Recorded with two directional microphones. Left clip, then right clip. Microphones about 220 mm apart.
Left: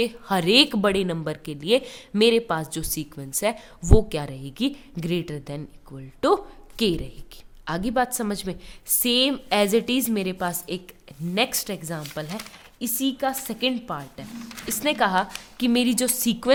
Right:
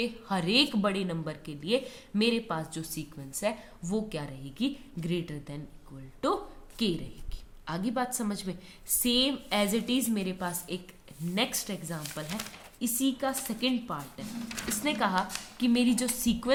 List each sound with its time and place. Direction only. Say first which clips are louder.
0.0 s a woman's voice: left 8 dB; 45° left (ahead or behind)